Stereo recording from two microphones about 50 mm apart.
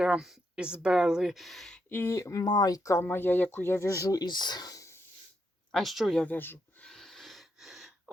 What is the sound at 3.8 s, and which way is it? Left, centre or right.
Speech, left.